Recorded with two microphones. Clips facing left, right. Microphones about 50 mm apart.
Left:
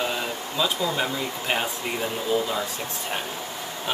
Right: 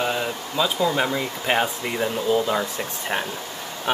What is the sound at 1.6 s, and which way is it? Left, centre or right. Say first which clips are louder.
Speech: right 4 dB; centre.